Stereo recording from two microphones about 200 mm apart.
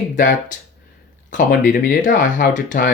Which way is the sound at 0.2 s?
40° left (ahead or behind).